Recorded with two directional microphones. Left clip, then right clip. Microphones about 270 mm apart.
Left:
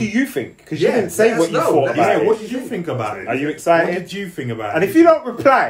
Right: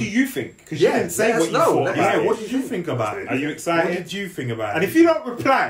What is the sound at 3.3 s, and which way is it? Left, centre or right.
Speech, centre.